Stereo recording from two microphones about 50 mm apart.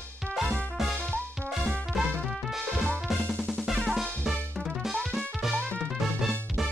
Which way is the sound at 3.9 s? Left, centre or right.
Centre.